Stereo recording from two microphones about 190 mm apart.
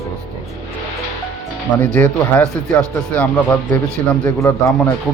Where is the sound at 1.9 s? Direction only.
10° left (ahead or behind).